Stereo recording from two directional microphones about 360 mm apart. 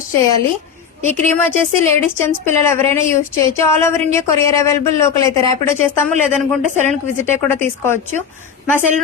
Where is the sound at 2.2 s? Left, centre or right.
Centre.